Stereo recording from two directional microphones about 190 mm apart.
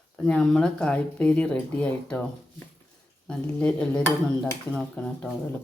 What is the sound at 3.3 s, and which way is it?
Speech, 5° left (ahead or behind).